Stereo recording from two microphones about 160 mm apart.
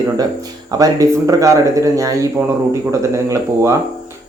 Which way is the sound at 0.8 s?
20° right (ahead or behind).